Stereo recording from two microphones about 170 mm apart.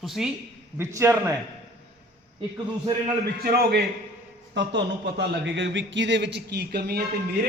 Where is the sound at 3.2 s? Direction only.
60° right (ahead or behind).